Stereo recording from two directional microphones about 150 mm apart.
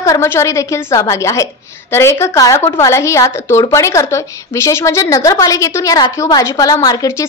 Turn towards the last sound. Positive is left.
turn(degrees=20)  # may be behind; listen again after turning